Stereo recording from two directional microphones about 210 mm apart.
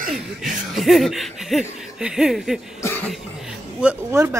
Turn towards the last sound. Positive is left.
turn(degrees=-10)  # may be behind; listen again after turning